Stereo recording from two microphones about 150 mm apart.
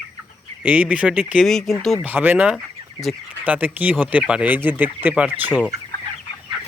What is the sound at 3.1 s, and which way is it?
Speech, centre (ahead or behind).